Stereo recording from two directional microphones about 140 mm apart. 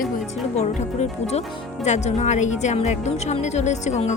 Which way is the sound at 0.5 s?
55° left (ahead or behind).